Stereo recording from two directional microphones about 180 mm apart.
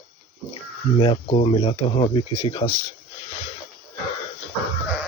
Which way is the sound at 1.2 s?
35° left (ahead or behind).